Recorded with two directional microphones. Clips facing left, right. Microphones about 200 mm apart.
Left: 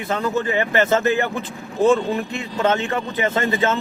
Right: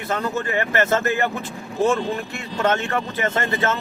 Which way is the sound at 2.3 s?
15° left (ahead or behind).